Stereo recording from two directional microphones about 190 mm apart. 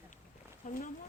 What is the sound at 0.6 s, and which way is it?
Speech, 45° left (ahead or behind).